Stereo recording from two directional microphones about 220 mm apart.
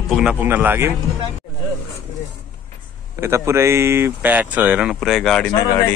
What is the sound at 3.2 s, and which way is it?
Speech, 10° right (ahead or behind).